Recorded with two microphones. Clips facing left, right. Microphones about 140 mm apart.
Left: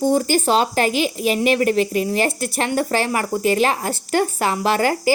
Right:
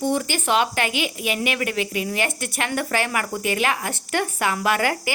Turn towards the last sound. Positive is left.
turn(degrees=35)  # may be behind; listen again after turning